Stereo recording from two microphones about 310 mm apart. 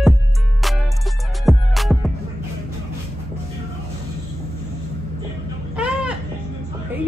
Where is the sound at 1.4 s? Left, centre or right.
Centre.